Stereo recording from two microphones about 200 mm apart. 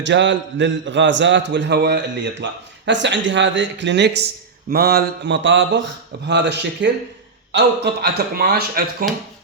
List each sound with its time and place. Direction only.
0.0 s a man's voice: 65° right (ahead or behind)
8.0 s speech: 50° right (ahead or behind)